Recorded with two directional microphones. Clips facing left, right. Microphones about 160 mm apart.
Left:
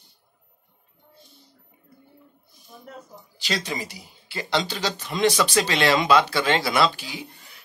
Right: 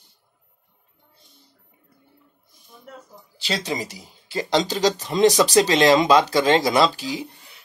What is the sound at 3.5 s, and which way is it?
Speech, 20° right (ahead or behind).